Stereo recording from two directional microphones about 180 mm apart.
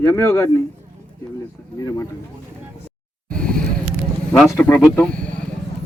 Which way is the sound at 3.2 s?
5° left (ahead or behind).